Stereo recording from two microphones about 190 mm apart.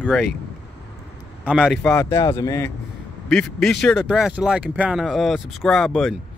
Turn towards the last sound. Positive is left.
turn(degrees=0)  # may be behind; listen again after turning